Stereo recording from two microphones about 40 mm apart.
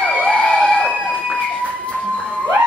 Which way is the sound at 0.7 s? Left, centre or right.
Left.